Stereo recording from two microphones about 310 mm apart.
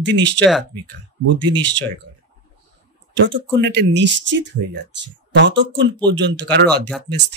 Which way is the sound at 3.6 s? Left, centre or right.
Right.